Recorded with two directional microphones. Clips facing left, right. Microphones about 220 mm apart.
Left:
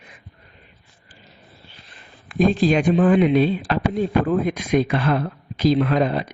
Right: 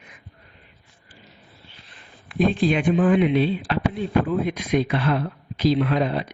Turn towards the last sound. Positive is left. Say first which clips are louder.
# left 2 dB
turn(degrees=45)  # may be behind; listen again after turning